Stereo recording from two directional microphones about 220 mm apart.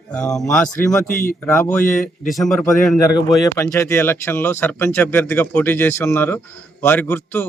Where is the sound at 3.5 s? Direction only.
10° left (ahead or behind).